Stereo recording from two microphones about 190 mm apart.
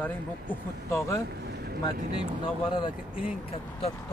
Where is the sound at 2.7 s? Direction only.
30° left (ahead or behind).